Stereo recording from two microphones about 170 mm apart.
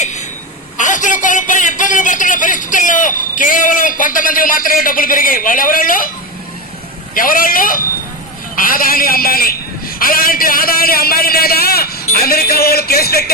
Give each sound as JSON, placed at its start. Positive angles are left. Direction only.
{"t": 0.0, "sound": "a sound", "side_deg": 45}
{"t": 0.8, "sound": "a man's voice", "side_deg": 45}
{"t": 7.1, "sound": "a man's voice", "side_deg": 55}